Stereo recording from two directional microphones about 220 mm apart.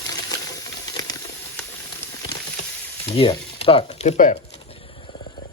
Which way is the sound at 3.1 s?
25° left (ahead or behind).